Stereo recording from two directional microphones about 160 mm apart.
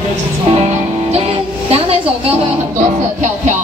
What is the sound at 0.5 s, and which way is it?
Music, 40° right (ahead or behind).